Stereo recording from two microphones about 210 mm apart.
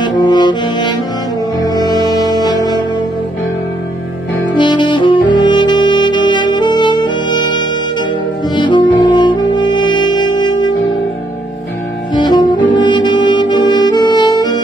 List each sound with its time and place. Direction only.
0.0 s brass instrument: 20° left (ahead or behind)
1.6 s music: 20° left (ahead or behind)
4.6 s saxophone: 20° left (ahead or behind)
12.1 s saxophone: 20° left (ahead or behind)